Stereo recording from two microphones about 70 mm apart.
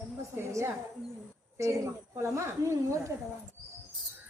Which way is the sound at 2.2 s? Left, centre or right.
Right.